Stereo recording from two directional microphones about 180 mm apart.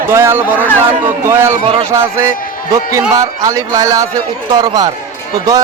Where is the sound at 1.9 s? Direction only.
15° right (ahead or behind).